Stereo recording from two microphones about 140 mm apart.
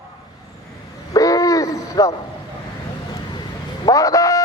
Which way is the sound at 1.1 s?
25° left (ahead or behind).